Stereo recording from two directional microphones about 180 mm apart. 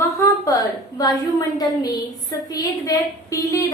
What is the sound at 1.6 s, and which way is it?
A woman's voice, 20° left (ahead or behind).